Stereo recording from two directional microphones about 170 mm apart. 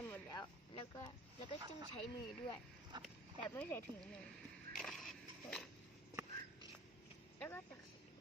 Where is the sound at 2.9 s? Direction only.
25° right (ahead or behind).